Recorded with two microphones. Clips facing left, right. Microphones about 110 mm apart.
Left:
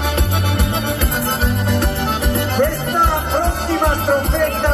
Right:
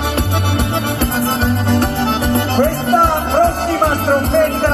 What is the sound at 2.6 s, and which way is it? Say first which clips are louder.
Music: right 4 dB; 40° right (ahead or behind).